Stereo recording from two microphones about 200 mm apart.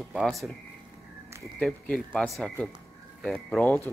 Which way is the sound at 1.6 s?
5° left (ahead or behind).